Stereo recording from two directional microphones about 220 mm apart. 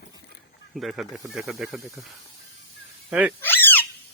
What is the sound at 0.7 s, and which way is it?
Speech, centre (ahead or behind).